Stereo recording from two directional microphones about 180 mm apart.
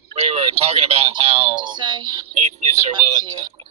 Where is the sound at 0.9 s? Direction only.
30° right (ahead or behind).